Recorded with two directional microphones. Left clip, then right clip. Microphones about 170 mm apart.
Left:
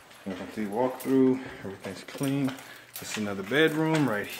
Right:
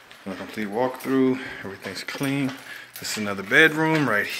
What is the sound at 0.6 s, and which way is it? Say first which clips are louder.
Speech: right 3 dB; 5° right (ahead or behind).